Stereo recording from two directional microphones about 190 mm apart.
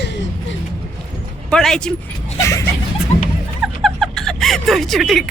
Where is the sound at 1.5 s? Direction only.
5° left (ahead or behind).